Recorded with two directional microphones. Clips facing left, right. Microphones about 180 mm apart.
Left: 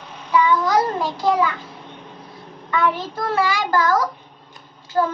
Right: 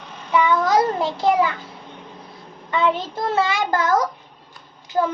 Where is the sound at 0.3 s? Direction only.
20° right (ahead or behind).